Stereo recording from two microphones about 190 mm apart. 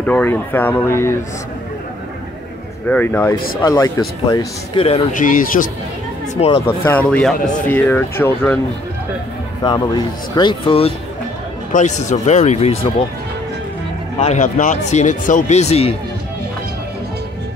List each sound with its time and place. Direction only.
0.0 s speech: 10° left (ahead or behind)
2.9 s a man's voice: 10° left (ahead or behind); by 5.7 s 45° left (ahead or behind)
6.3 s speech: 35° left (ahead or behind)
6.6 s speech: 10° left (ahead or behind)
9.6 s speech: 20° left (ahead or behind)
11.7 s speech: 40° left (ahead or behind)
14.2 s speech: 40° left (ahead or behind)